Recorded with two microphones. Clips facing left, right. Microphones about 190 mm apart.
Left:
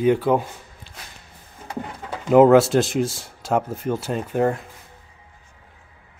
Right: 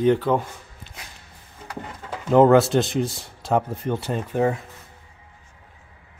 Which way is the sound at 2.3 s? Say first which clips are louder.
Left 2 dB; 5° left (ahead or behind).